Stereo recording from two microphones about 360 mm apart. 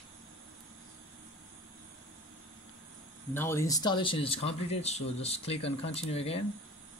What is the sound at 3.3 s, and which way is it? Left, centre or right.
Speech, centre.